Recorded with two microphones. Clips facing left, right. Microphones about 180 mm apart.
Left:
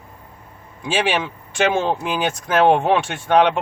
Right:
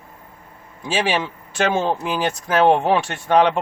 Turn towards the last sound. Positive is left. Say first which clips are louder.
# even
turn(degrees=0)  # may be behind; listen again after turning